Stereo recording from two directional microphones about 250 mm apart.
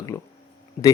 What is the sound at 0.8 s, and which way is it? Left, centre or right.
Speech, left.